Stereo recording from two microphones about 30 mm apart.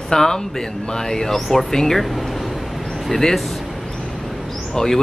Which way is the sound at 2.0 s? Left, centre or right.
Centre.